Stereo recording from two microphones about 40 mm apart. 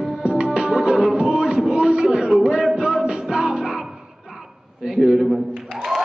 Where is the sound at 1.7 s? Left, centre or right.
Right.